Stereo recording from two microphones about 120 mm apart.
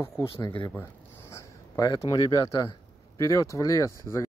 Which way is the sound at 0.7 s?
20° left (ahead or behind).